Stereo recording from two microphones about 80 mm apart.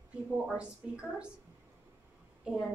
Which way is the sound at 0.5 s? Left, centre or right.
Centre.